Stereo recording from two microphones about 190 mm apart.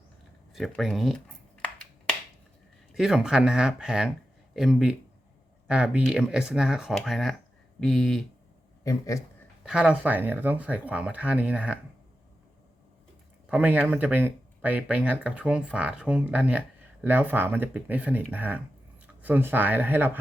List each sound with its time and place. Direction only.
0.5 s speech: centre (ahead or behind)
2.9 s speech: centre (ahead or behind)
8.8 s a man's voice: 15° left (ahead or behind)
9.6 s speech: 5° right (ahead or behind)
13.5 s speech: 10° right (ahead or behind)